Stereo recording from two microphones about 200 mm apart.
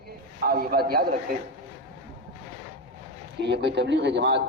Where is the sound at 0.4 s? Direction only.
50° right (ahead or behind).